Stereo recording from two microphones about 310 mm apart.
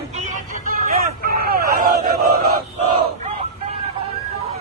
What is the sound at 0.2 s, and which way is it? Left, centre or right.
Vehicle, right.